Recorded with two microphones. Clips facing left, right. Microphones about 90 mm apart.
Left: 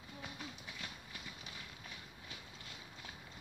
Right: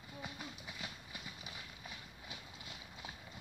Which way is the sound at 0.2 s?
5° right (ahead or behind).